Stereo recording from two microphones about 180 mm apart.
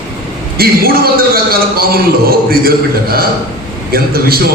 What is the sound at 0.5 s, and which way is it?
A man's voice, 55° right (ahead or behind).